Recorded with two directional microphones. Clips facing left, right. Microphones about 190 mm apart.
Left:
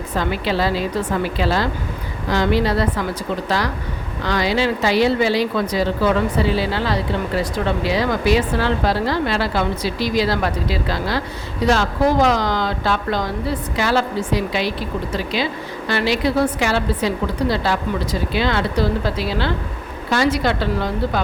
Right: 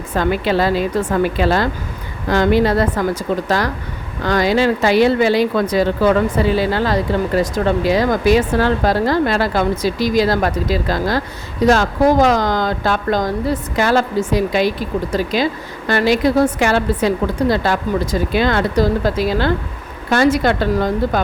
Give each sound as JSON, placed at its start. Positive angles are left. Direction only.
{"t": 0.2, "sound": "speech", "side_deg": -50}
{"t": 4.2, "sound": "speech", "side_deg": -45}